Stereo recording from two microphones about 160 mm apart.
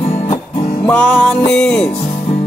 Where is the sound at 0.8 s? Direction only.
5° left (ahead or behind).